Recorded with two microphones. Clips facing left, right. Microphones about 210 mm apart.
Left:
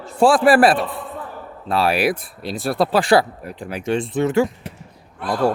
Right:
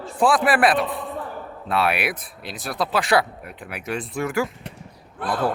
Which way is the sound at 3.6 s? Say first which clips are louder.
Left 7 dB; 30° left (ahead or behind).